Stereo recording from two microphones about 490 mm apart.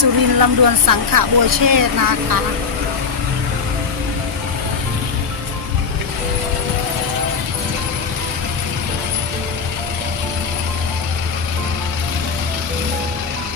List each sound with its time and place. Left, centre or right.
0.0 s speech: right